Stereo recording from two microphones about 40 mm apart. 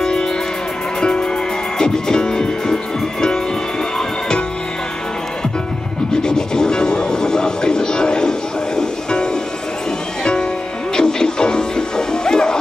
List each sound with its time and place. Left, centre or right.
0.0 s music: centre
6.2 s music: centre
11.0 s music: centre